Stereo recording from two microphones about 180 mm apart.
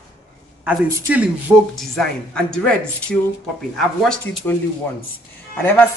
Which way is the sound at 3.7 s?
Centre (ahead or behind).